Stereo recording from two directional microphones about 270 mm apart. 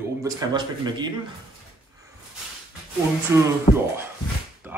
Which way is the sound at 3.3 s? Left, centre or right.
Centre.